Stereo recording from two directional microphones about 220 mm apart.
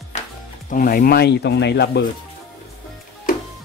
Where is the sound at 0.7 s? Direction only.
40° left (ahead or behind).